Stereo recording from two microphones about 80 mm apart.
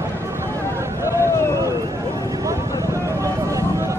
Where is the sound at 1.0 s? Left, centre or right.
Left.